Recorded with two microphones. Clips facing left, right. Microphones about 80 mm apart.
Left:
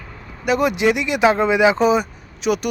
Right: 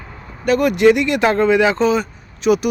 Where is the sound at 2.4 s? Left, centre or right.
Centre.